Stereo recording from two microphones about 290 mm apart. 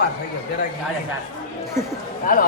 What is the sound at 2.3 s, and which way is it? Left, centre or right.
Speech, left.